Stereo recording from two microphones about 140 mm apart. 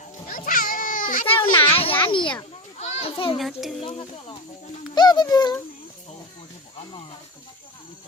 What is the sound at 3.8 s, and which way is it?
Speech, 40° left (ahead or behind).